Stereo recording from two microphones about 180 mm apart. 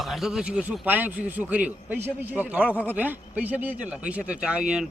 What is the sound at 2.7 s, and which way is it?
Speech, 10° left (ahead or behind).